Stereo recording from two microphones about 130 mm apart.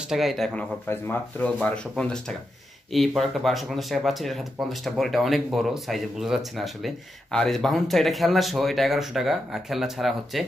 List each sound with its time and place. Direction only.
0.1 s speech: centre (ahead or behind)
0.8 s speech: 15° left (ahead or behind); by 10.4 s centre (ahead or behind)